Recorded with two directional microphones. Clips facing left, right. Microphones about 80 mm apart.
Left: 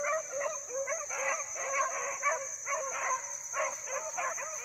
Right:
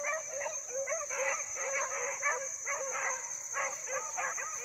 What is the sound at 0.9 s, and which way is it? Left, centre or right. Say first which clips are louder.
Dog: even; centre.